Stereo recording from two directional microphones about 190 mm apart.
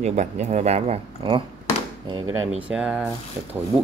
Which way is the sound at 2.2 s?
90° right.